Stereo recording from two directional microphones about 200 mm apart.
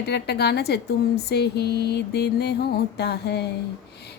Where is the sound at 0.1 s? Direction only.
55° left (ahead or behind).